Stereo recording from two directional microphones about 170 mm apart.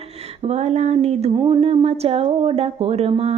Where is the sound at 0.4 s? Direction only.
40° right (ahead or behind).